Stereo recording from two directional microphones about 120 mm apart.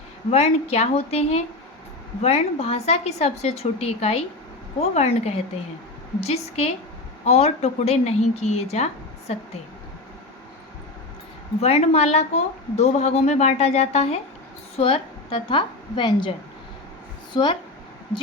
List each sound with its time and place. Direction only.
0.3 s speech: 60° left (ahead or behind)
11.6 s speech: 65° left (ahead or behind)
14.8 s a woman's voice: 50° left (ahead or behind)
17.3 s speech: 40° left (ahead or behind)